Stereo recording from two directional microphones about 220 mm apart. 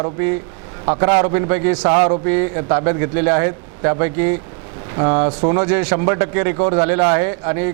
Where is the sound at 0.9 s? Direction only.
20° right (ahead or behind).